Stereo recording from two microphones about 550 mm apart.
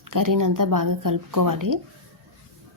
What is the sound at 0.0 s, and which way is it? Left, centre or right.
Speech, right.